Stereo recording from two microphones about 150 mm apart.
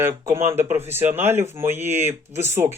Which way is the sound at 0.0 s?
15° right (ahead or behind).